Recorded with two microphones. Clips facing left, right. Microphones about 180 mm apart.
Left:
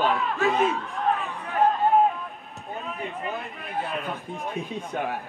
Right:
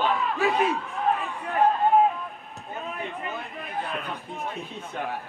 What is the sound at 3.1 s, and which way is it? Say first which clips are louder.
Speech: left 2 dB; centre (ahead or behind).